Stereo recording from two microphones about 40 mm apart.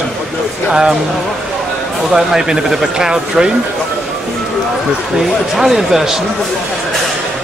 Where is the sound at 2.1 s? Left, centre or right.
Centre.